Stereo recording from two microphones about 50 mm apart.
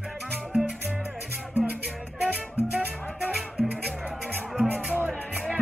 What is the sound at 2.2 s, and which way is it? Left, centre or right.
Music, right.